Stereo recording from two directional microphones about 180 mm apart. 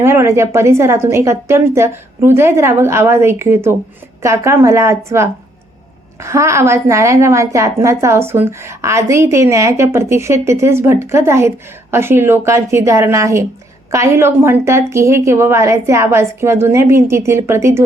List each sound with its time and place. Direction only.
0.0 s a woman's voice: 15° right (ahead or behind)